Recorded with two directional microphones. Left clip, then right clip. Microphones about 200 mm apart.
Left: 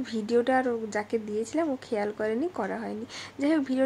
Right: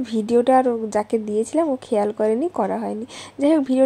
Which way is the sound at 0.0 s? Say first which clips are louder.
Right 7 dB; 30° right (ahead or behind).